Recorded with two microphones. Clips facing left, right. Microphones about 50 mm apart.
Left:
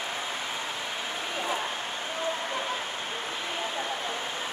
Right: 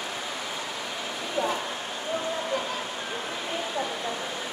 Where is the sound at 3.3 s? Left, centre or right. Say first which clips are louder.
Right 3 dB; left.